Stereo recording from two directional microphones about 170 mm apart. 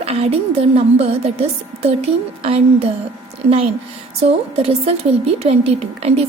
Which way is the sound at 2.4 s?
35° right (ahead or behind).